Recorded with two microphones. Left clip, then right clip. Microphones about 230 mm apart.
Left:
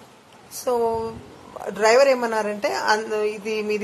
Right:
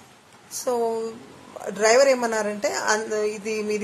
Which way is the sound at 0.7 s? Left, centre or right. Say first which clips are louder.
Left 2 dB; centre.